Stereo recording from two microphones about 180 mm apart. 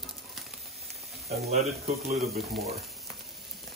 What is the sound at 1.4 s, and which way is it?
Speech, 35° right (ahead or behind).